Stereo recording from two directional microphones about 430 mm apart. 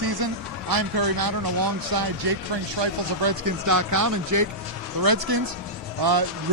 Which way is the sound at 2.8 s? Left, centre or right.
Right.